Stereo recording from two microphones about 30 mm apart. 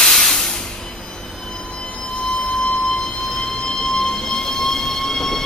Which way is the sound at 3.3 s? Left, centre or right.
Centre.